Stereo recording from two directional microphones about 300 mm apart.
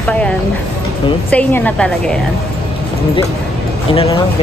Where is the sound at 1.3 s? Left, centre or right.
Centre.